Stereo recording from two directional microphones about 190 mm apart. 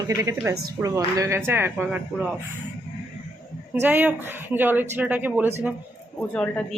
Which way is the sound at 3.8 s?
10° right (ahead or behind).